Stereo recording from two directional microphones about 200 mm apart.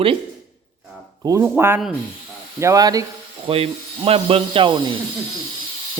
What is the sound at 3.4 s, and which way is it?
Speech, 30° right (ahead or behind).